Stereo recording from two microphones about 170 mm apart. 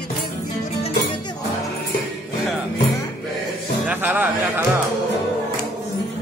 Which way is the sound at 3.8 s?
10° right (ahead or behind).